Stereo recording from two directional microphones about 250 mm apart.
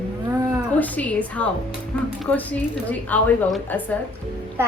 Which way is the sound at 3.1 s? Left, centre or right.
Centre.